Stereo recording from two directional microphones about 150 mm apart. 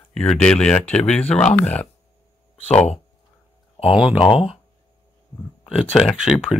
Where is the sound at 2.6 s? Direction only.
50° left (ahead or behind).